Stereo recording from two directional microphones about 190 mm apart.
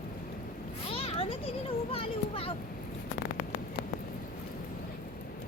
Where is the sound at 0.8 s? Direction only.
30° left (ahead or behind).